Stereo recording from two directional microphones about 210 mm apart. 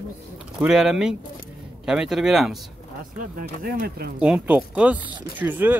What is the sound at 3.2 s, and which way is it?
Speech, 40° right (ahead or behind).